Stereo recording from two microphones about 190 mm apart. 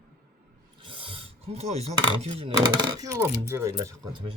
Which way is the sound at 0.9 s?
30° right (ahead or behind).